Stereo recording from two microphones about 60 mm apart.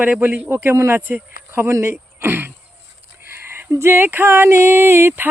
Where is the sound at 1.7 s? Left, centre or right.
Right.